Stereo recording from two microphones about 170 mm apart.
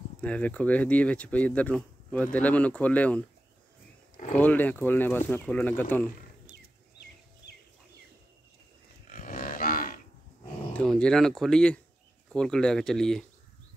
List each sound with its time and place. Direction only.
0.2 s speech: 10° left (ahead or behind)
4.4 s speech: 10° left (ahead or behind)
6.5 s a sound: 80° left
9.1 s livestock: 55° left (ahead or behind)
10.7 s speech: 5° left (ahead or behind)